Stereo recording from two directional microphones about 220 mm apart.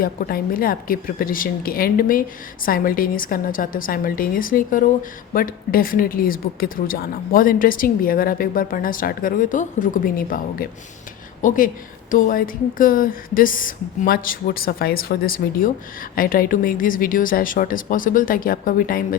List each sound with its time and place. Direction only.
0.0 s speech: 40° left (ahead or behind)